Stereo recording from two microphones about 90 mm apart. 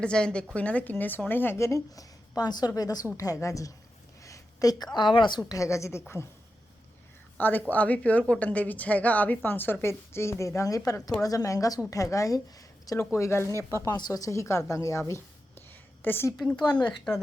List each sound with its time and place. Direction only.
0.0 s a woman's voice: 10° left (ahead or behind); by 5.4 s 60° left (ahead or behind)
5.5 s a woman's voice: 35° left (ahead or behind)
7.3 s a woman's voice: 20° left (ahead or behind)
16.7 s a woman's voice: 10° left (ahead or behind)